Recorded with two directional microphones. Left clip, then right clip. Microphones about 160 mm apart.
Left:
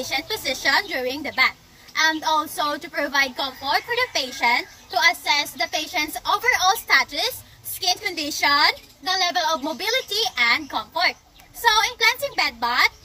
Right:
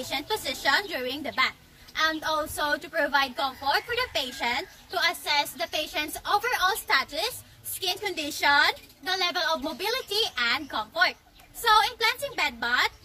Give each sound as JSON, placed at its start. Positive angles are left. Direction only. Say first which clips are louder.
{"t": 0.3, "sound": "a woman's voice", "louder": "left 3 dB", "side_deg": -15}